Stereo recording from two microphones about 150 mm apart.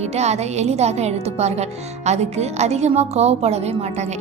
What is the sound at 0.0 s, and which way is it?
A woman's voice, 45° right (ahead or behind).